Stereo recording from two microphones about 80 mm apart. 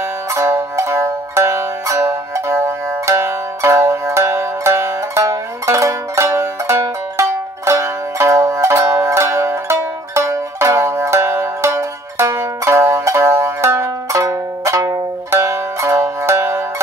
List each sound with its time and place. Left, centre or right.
0.3 s zither: right